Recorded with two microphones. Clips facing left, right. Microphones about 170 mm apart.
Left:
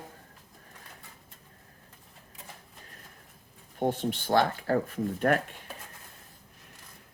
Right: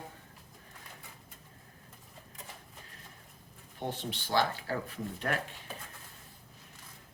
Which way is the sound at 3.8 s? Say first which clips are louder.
Left 9 dB; 50° left (ahead or behind).